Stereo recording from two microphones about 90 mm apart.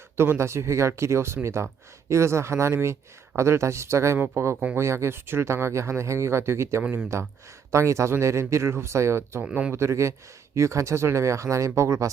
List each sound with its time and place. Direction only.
0.2 s speech: 30° right (ahead or behind)
9.4 s speech: 10° right (ahead or behind)
9.7 s speech: 30° right (ahead or behind)